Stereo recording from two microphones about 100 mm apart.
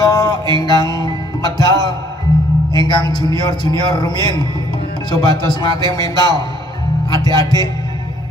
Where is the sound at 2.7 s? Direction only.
45° left (ahead or behind).